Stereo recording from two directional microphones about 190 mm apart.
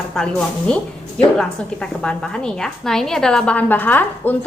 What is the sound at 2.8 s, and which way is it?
A woman's voice, centre (ahead or behind).